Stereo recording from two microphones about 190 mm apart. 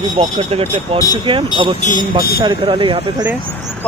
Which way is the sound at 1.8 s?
50° left (ahead or behind).